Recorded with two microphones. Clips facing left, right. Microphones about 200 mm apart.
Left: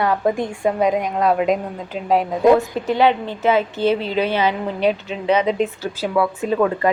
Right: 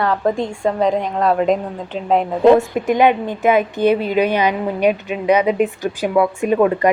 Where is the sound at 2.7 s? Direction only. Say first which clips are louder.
Right 2 dB; 15° right (ahead or behind).